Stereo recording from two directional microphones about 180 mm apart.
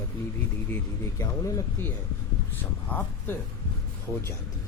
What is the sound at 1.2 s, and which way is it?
Speech, 20° left (ahead or behind).